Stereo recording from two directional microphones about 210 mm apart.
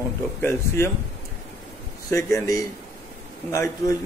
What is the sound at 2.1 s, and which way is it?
Speech, 15° left (ahead or behind).